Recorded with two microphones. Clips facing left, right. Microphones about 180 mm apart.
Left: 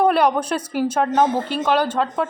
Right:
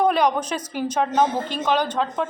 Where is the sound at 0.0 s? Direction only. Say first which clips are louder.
Left 2 dB; 5° left (ahead or behind).